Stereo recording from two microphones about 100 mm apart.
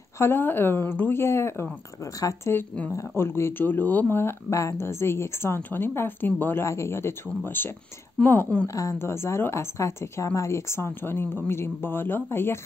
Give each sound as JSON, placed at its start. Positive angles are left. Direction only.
{"t": 0.2, "sound": "speech", "side_deg": 20}
{"t": 8.6, "sound": "speech", "side_deg": 35}